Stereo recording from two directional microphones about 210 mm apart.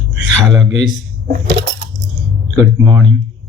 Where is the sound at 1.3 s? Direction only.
55° right (ahead or behind).